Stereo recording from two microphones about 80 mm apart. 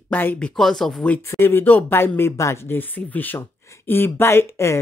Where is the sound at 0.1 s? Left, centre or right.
Left.